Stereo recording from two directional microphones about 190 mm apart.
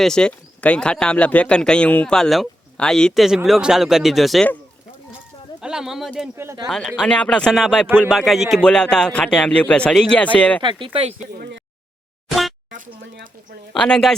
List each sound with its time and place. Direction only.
0.0 s speech: 5° left (ahead or behind)
5.5 s speech: 5° right (ahead or behind)
6.3 s speech: 15° right (ahead or behind)
6.7 s speech: 5° left (ahead or behind)
10.6 s speech: 25° right (ahead or behind)
11.3 s speech: 60° right (ahead or behind)
12.3 s a sound: centre (ahead or behind)
13.7 s speech: 5° left (ahead or behind)